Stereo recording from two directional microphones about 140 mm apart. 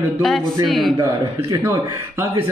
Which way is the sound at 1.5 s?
20° right (ahead or behind).